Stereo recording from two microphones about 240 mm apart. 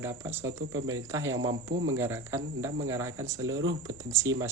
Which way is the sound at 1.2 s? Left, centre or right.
Right.